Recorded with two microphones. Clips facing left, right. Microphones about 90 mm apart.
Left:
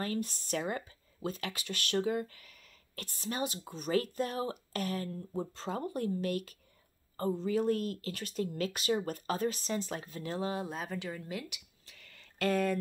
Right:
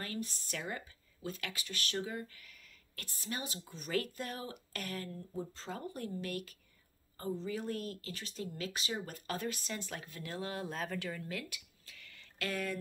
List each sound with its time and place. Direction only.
0.0 s speech: 45° left (ahead or behind)
3.9 s speech: 30° left (ahead or behind)
5.3 s speech: 50° left (ahead or behind)
9.3 s speech: 30° left (ahead or behind)
10.7 s speech: 10° left (ahead or behind); by 12.7 s 45° left (ahead or behind)